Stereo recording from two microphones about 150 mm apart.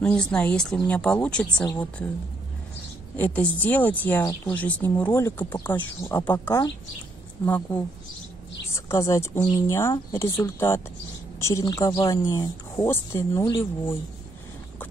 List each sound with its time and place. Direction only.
0.0 s speech: 5° left (ahead or behind)
3.2 s speech: 10° left (ahead or behind)
7.4 s speech: 10° left (ahead or behind)
8.7 s speech: 20° left (ahead or behind)